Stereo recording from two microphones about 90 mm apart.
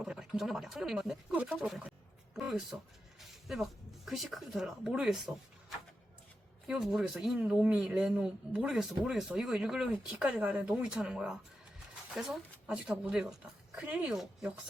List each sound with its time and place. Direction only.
0.0 s speech: 5° right (ahead or behind)
6.7 s speech: 5° right (ahead or behind)
7.3 s speech: 15° right (ahead or behind)
13.8 s speech: 20° right (ahead or behind)
14.1 s speech: 5° right (ahead or behind)